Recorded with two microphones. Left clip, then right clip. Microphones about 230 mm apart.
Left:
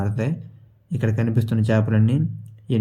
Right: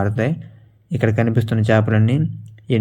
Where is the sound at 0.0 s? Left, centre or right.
Centre.